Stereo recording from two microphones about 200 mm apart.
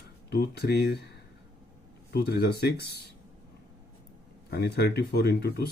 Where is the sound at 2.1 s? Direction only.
50° left (ahead or behind).